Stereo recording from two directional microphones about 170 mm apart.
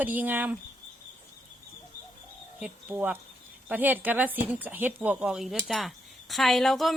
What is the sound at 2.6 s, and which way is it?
Speech, 10° right (ahead or behind).